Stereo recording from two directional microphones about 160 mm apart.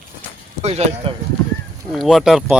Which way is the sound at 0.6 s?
45° right (ahead or behind).